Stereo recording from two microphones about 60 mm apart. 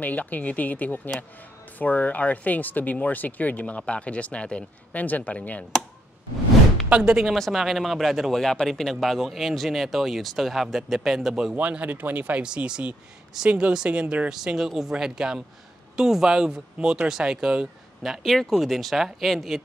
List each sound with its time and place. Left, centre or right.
0.0 s speech: left
6.9 s speech: centre
7.3 s speech: centre
11.5 s speech: right
12.4 s speech: centre
14.3 s speech: centre
18.0 s speech: centre